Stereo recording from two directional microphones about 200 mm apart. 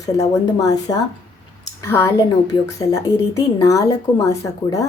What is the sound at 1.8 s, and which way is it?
A woman's voice, 15° left (ahead or behind).